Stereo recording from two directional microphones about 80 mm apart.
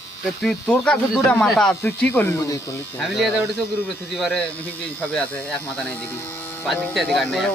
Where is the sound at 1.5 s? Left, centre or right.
Centre.